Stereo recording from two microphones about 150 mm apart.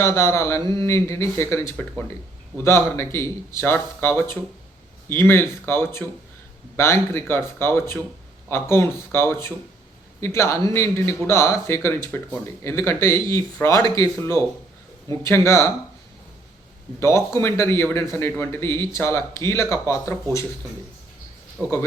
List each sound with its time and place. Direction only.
0.0 s speech: 20° left (ahead or behind)
17.0 s speech: 20° left (ahead or behind)
21.6 s speech: 20° right (ahead or behind)